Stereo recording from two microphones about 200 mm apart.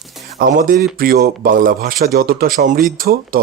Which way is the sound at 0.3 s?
45° right (ahead or behind).